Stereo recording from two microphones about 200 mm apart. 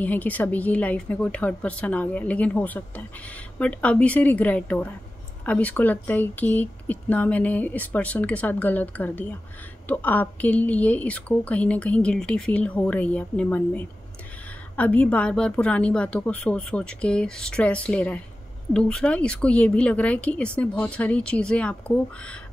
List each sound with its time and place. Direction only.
0.0 s a woman's voice: 10° left (ahead or behind)